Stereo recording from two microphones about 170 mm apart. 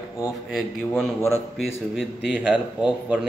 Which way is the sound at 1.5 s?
Centre (ahead or behind).